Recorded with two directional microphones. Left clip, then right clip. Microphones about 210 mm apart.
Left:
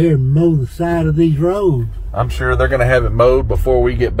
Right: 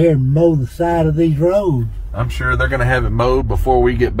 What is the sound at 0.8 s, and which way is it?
Speech, 25° right (ahead or behind).